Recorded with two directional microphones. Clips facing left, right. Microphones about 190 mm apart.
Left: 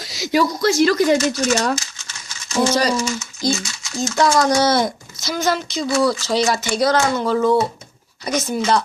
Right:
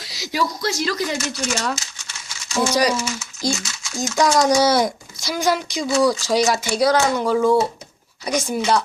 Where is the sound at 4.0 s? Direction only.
15° right (ahead or behind).